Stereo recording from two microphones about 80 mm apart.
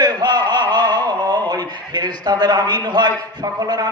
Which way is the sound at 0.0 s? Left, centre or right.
Right.